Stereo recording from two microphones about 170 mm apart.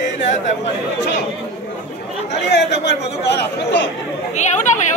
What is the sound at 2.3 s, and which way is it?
Speech, 90° left.